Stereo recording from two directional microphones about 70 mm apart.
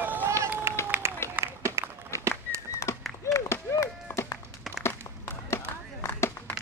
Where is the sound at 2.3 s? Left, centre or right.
Right.